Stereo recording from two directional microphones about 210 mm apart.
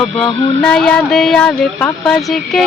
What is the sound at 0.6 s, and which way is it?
Speech, 5° left (ahead or behind).